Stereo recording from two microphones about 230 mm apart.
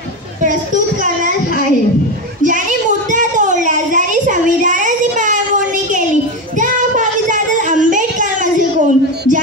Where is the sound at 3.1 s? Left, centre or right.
Right.